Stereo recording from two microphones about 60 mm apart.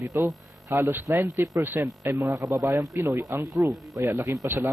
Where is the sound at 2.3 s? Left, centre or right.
Right.